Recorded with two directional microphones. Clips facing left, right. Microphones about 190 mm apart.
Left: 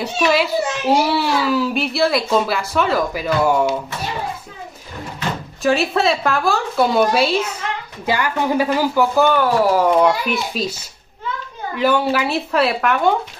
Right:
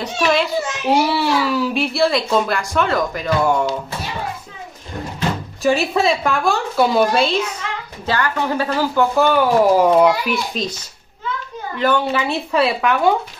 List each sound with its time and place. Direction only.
0.0 s a child's voice: 5° left (ahead or behind)
5.6 s a child's voice: centre (ahead or behind)
9.1 s a child's voice: centre (ahead or behind)
9.4 s speech: 15° right (ahead or behind)
9.9 s a child's voice: 5° right (ahead or behind)
11.7 s a child's voice: 10° left (ahead or behind)